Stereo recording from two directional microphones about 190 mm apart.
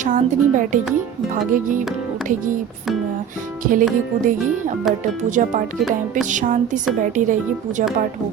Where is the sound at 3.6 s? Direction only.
45° right (ahead or behind).